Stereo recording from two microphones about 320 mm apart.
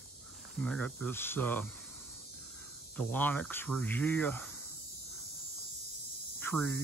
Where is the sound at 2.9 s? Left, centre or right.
Centre.